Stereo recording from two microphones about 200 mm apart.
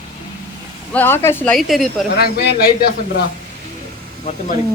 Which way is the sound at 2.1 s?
50° left (ahead or behind).